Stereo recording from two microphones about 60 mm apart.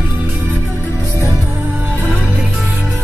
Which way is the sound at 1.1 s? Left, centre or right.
Right.